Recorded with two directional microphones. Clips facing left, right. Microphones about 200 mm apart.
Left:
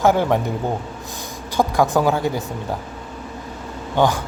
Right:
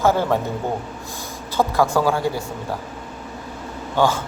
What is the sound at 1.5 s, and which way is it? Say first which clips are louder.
Speech: left 1 dB; 15° left (ahead or behind).